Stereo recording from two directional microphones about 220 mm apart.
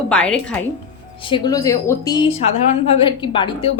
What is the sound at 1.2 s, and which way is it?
A woman's voice, 25° left (ahead or behind).